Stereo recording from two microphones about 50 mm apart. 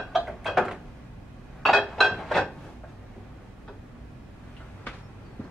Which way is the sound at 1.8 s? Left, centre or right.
Centre.